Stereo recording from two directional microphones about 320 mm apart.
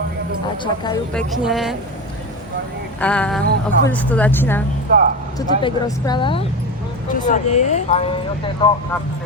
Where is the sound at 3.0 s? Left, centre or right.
Centre.